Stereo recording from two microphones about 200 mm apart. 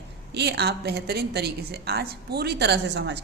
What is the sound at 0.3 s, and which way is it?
A woman's voice, 55° right (ahead or behind).